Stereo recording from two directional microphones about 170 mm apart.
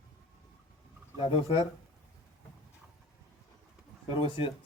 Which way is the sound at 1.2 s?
35° left (ahead or behind).